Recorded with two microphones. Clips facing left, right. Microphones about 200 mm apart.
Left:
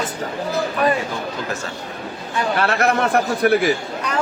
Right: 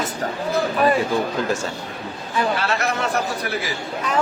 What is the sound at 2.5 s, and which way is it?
Speech, 55° left (ahead or behind).